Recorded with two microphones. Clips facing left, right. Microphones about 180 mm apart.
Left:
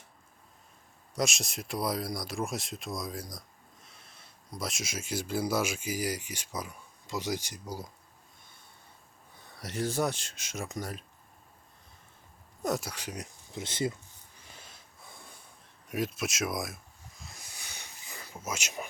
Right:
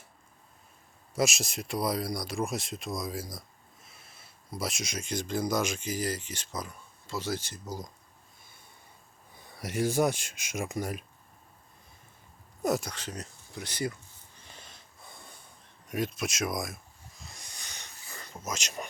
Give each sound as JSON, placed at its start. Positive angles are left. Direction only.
{"t": 1.1, "sound": "speech", "side_deg": -5}
{"t": 9.3, "sound": "speech", "side_deg": -10}
{"t": 12.6, "sound": "speech", "side_deg": -5}
{"t": 12.9, "sound": "speech", "side_deg": 10}
{"t": 14.5, "sound": "snort", "side_deg": 5}
{"t": 15.9, "sound": "speech", "side_deg": 5}
{"t": 17.2, "sound": "wheeze", "side_deg": 5}
{"t": 18.2, "sound": "speech", "side_deg": 5}